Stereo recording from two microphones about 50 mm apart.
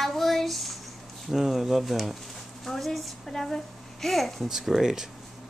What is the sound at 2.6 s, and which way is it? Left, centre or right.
A child's voice, centre.